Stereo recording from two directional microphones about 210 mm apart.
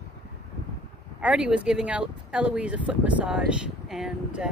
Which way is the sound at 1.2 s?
5° right (ahead or behind).